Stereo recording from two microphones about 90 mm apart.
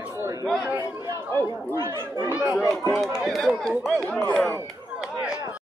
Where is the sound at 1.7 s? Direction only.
30° right (ahead or behind).